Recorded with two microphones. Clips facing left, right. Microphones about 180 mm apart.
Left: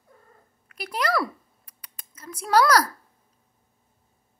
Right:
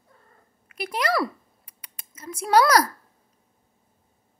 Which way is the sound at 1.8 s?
10° right (ahead or behind).